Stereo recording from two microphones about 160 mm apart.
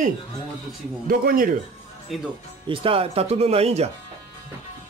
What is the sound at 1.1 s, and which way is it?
Speech, 65° right (ahead or behind).